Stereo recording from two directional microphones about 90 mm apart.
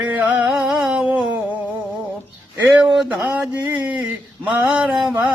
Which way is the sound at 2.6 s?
20° right (ahead or behind).